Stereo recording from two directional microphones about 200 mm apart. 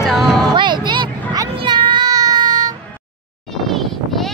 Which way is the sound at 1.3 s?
20° right (ahead or behind).